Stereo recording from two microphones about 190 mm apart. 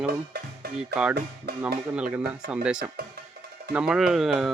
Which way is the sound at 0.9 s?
60° right (ahead or behind).